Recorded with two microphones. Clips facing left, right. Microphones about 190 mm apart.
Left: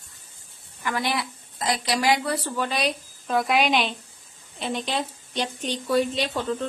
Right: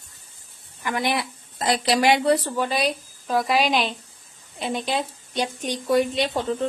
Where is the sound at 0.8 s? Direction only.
15° right (ahead or behind).